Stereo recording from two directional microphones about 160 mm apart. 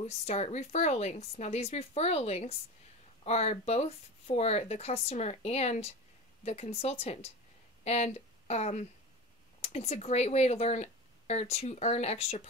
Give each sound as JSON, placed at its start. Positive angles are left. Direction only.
{"t": 0.0, "sound": "speech", "side_deg": 45}